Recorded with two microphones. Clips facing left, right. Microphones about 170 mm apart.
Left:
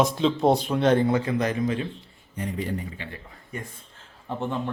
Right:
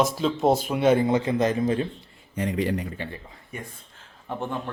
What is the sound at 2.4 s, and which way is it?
Speech, 90° right.